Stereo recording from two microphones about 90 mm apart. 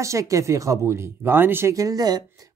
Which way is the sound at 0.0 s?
35° right (ahead or behind).